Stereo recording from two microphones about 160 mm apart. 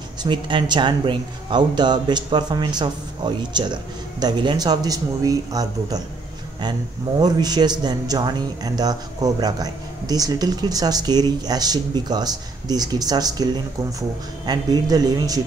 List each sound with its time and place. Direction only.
0.2 s a man's voice: 30° right (ahead or behind)
7.2 s a man's voice: 25° right (ahead or behind)